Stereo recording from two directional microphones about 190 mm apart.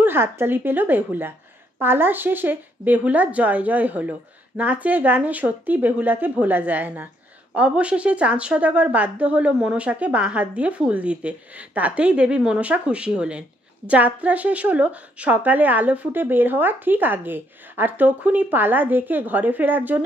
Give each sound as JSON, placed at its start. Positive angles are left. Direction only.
{"t": 0.0, "sound": "a woman's voice", "side_deg": -10}